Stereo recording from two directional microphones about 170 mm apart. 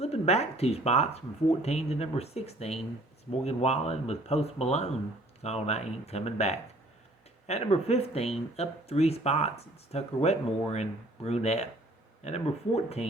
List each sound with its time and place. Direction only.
0.0 s speech: 40° left (ahead or behind)